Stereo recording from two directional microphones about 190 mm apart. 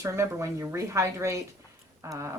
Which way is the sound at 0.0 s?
15° right (ahead or behind).